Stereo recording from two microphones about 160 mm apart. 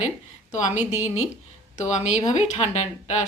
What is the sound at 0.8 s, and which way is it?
Speech, 45° left (ahead or behind).